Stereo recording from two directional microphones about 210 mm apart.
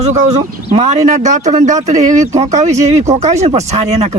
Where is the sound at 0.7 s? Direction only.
30° right (ahead or behind).